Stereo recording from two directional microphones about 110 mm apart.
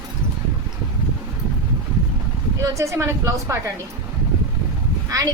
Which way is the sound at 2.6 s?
25° right (ahead or behind).